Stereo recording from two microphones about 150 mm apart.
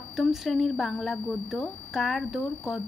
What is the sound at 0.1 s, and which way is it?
A woman's voice, centre (ahead or behind).